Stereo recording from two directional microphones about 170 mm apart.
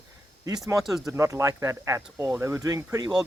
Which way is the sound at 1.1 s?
15° right (ahead or behind).